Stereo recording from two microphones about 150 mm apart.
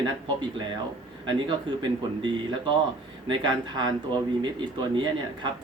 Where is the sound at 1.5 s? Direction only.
30° right (ahead or behind).